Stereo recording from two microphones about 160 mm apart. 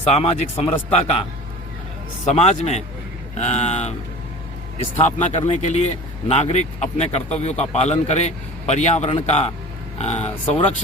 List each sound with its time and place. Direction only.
0.1 s speech: 40° left (ahead or behind)
2.3 s speech: 40° left (ahead or behind)
5.3 s speech: 45° left (ahead or behind)